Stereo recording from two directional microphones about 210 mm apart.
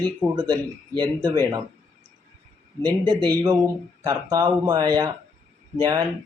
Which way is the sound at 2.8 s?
20° right (ahead or behind).